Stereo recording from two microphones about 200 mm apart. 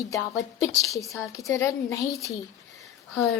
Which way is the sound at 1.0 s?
Centre (ahead or behind).